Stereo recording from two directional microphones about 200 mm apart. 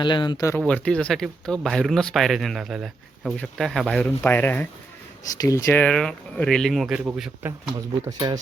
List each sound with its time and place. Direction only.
0.0 s speech: 25° left (ahead or behind)
0.6 s speech: 5° left (ahead or behind)
8.0 s speech: 15° right (ahead or behind)